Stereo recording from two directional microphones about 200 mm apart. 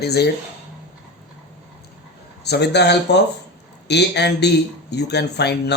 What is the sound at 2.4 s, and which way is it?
Speech, 55° left (ahead or behind).